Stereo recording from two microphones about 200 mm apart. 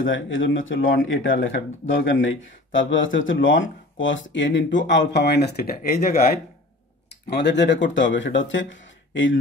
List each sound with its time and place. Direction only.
0.0 s speech: 75° left (ahead or behind); by 6.4 s 50° left (ahead or behind)
7.1 s speech: 60° left (ahead or behind)